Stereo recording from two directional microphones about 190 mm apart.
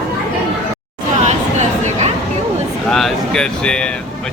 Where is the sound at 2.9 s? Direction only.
5° left (ahead or behind).